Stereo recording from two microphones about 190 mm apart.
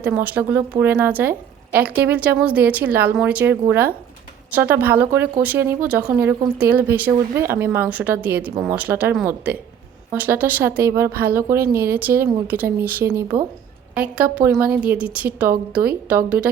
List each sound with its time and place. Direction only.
0.0 s a woman's voice: 10° right (ahead or behind)
11.1 s speech: 50° right (ahead or behind)
11.3 s a woman's voice: 15° right (ahead or behind)